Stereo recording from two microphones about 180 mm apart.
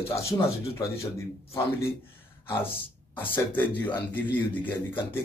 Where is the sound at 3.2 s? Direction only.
10° left (ahead or behind).